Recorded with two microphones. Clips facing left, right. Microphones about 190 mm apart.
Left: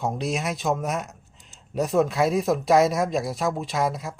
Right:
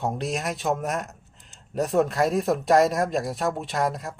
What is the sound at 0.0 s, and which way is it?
Speech, centre (ahead or behind).